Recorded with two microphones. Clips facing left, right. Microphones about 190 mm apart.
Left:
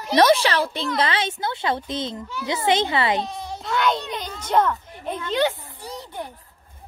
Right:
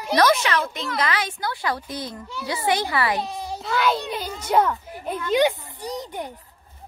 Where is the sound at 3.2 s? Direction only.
10° right (ahead or behind).